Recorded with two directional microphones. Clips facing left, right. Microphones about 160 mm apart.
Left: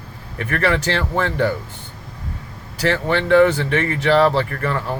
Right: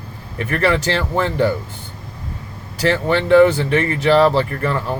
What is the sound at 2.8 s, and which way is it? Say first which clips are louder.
Speech: right 2 dB; 35° right (ahead or behind).